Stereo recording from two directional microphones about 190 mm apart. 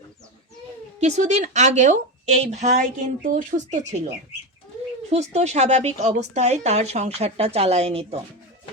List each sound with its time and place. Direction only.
0.9 s a woman's voice: 35° right (ahead or behind)